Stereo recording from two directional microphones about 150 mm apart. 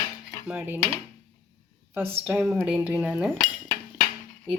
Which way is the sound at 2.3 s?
10° right (ahead or behind).